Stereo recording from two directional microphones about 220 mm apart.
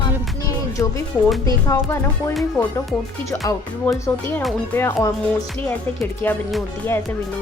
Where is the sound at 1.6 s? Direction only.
10° left (ahead or behind).